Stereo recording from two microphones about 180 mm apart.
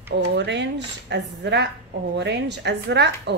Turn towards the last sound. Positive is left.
turn(degrees=-75)  # may be behind; listen again after turning